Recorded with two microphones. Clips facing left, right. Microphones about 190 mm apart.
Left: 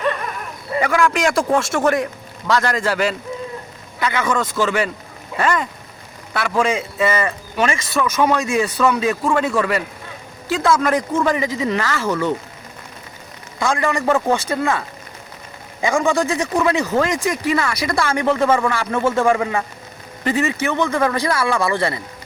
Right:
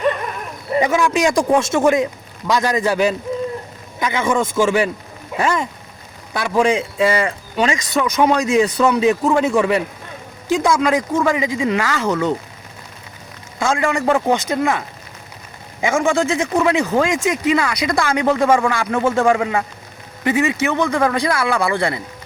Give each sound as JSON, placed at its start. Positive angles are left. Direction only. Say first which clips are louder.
{"t": 0.7, "sound": "a man's voice", "louder": "right 1 dB", "side_deg": -20}
{"t": 4.2, "sound": "speech", "louder": "right 4 dB", "side_deg": -25}
{"t": 4.6, "sound": "a man's voice", "louder": "right 3 dB", "side_deg": -10}
{"t": 13.7, "sound": "a man's voice", "louder": "right 1 dB", "side_deg": -15}